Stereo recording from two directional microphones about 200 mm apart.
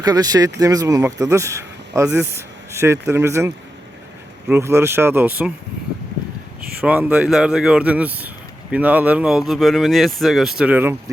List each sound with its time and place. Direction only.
0.0 s speech: 20° right (ahead or behind)
6.6 s a sound: 50° right (ahead or behind)
6.8 s speech: 5° right (ahead or behind)